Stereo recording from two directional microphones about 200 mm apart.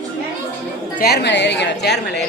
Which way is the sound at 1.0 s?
55° left (ahead or behind).